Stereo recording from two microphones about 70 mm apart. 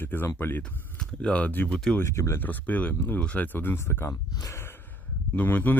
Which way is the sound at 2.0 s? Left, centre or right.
Left.